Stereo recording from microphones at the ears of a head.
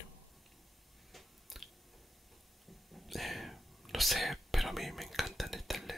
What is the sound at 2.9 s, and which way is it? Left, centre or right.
Whispering, centre.